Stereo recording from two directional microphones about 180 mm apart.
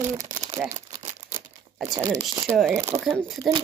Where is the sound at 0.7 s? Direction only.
40° right (ahead or behind).